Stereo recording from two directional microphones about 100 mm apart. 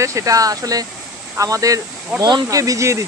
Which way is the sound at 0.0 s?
30° right (ahead or behind).